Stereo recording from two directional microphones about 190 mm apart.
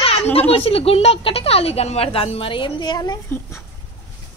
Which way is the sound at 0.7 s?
30° left (ahead or behind).